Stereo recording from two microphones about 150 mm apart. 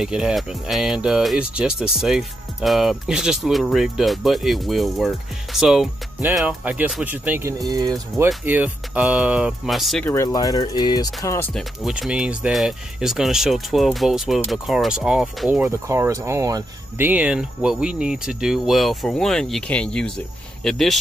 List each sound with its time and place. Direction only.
0.0 s speech: 5° right (ahead or behind); by 8.3 s 25° right (ahead or behind)
8.5 s speech: 10° right (ahead or behind)
10.0 s speech: 20° left (ahead or behind)
11.5 s speech: centre (ahead or behind)
15.9 s speech: 20° right (ahead or behind)
17.0 s speech: 10° right (ahead or behind)